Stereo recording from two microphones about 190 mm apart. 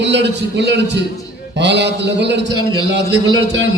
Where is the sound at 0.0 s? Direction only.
65° right (ahead or behind).